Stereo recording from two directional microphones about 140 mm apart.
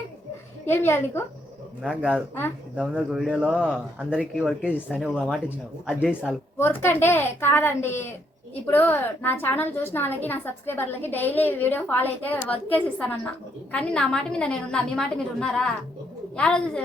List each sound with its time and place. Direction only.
0.6 s a woman's voice: 15° left (ahead or behind)
1.8 s speech: 10° right (ahead or behind)
2.3 s a woman's voice: 15° left (ahead or behind)
2.8 s a man's voice: 5° right (ahead or behind)
6.6 s a woman's voice: 15° left (ahead or behind)